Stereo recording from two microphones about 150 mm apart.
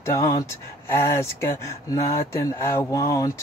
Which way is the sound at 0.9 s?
15° left (ahead or behind).